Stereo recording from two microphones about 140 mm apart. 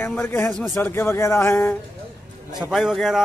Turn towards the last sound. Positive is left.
turn(degrees=0)  # may be behind; listen again after turning